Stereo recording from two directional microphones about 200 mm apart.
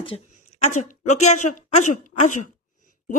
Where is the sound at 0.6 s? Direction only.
35° left (ahead or behind).